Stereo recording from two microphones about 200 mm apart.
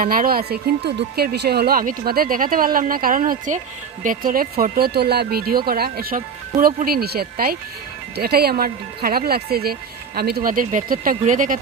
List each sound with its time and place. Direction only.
0.0 s speech: 45° right (ahead or behind)